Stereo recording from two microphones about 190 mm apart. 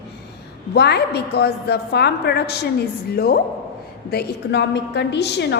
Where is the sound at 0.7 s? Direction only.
60° left (ahead or behind).